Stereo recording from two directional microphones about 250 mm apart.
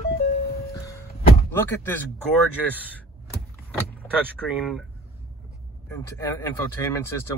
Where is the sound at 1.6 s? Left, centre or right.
Centre.